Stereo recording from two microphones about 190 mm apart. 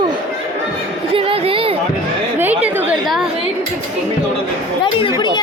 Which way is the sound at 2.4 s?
10° right (ahead or behind).